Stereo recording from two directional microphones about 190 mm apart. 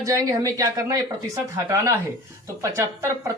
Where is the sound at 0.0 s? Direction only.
20° right (ahead or behind).